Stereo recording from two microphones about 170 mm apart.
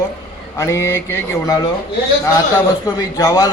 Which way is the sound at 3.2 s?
20° left (ahead or behind).